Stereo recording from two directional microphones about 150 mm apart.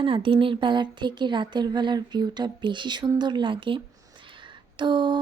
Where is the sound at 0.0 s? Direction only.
35° right (ahead or behind).